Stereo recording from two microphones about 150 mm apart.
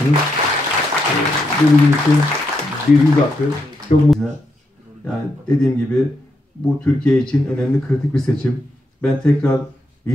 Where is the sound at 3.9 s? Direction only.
50° left (ahead or behind).